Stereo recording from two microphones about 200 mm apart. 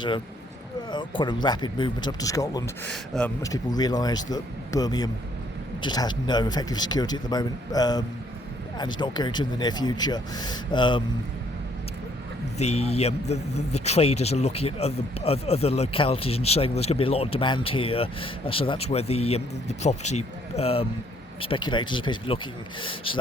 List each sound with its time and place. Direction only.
0.9 s speech: 25° left (ahead or behind)
2.8 s speech: 5° left (ahead or behind)
3.4 s speech: 20° left (ahead or behind)
12.5 s speech: 30° left (ahead or behind)